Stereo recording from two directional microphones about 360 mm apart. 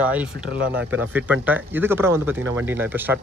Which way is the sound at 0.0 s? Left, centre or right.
Centre.